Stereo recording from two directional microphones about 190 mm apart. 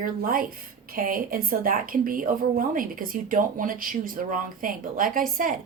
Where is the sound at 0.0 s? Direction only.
50° right (ahead or behind).